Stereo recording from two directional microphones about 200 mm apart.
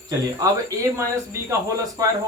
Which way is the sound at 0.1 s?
20° right (ahead or behind).